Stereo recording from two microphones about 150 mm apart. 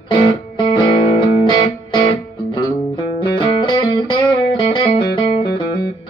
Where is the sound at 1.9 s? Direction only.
30° left (ahead or behind).